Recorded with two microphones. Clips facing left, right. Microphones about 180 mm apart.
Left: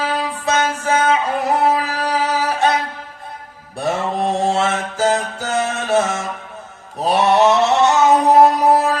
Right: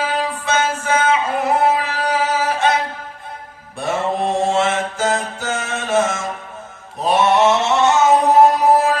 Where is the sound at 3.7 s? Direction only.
35° left (ahead or behind).